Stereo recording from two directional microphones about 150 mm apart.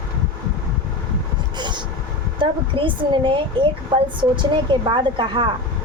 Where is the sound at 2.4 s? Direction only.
35° right (ahead or behind).